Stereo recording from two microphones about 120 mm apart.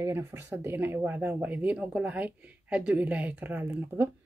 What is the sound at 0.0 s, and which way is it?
A woman's voice, 20° right (ahead or behind).